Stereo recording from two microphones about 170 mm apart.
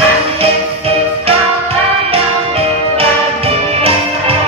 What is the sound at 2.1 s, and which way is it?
Music, 35° right (ahead or behind).